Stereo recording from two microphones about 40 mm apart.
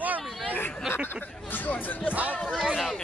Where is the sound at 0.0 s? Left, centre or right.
Right.